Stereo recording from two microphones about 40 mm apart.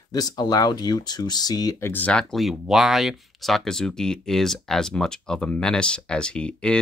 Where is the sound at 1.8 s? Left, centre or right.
Left.